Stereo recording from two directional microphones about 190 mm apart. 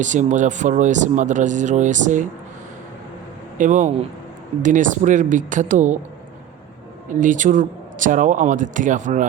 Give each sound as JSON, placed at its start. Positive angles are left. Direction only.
{"t": 0.0, "sound": "speech", "side_deg": -40}
{"t": 3.6, "sound": "speech", "side_deg": -40}
{"t": 7.1, "sound": "speech", "side_deg": -40}